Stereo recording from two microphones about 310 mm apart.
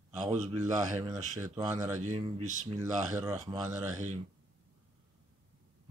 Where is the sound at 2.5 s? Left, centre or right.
Right.